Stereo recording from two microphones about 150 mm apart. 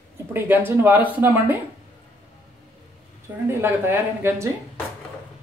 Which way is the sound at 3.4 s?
15° right (ahead or behind).